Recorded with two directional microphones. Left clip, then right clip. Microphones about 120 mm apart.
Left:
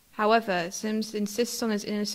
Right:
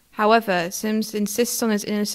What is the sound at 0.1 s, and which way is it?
A woman's voice, 25° right (ahead or behind).